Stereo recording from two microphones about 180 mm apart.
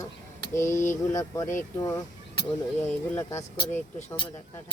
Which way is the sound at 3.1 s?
15° left (ahead or behind).